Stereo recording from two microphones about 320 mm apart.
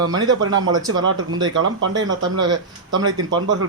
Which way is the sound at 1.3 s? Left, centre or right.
Right.